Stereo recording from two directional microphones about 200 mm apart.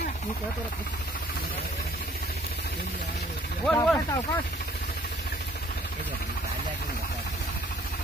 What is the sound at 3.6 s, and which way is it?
Speech, 5° left (ahead or behind).